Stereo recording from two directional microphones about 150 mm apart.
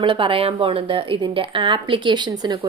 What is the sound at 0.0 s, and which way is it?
A woman's voice, 35° right (ahead or behind).